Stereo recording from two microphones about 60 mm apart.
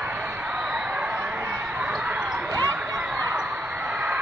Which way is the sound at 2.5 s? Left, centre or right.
Right.